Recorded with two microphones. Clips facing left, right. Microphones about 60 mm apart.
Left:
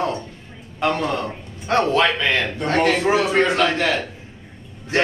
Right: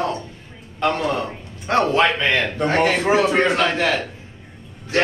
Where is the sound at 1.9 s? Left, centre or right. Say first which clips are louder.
Right 1 dB; right; by 4.0 s centre.